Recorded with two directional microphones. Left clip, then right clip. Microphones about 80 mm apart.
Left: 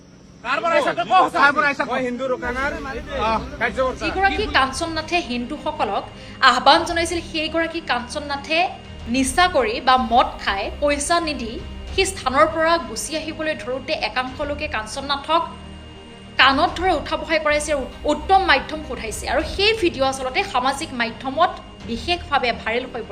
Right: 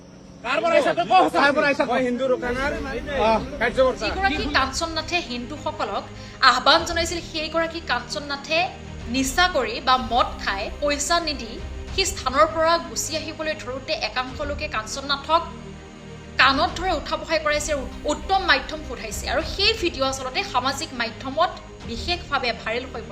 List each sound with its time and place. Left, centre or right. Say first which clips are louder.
0.5 s speech: even; left
1.6 s a man's voice: even; right
1.9 s speech: right 1 dB; centre
3.8 s a woman's voice: even; right